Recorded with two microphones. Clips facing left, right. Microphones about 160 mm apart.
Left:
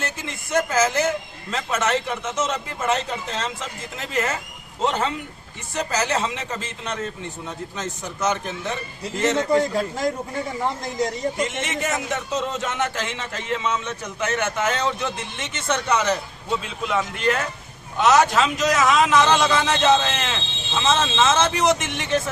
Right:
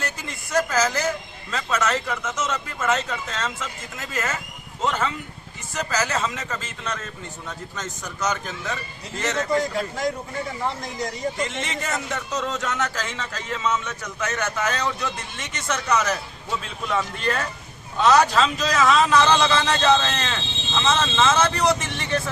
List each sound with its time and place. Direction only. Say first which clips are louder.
0.5 s a man's voice: left 2 dB; 20° left (ahead or behind)